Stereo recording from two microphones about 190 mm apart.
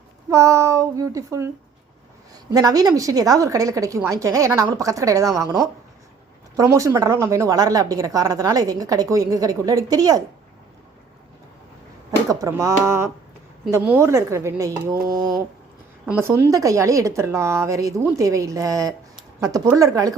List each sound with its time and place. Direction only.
0.3 s a woman's voice: 15° right (ahead or behind)
2.5 s a woman's voice: 20° right (ahead or behind)
6.6 s a woman's voice: 15° right (ahead or behind)
12.3 s a woman's voice: 15° right (ahead or behind)
16.2 s a woman's voice: 15° right (ahead or behind)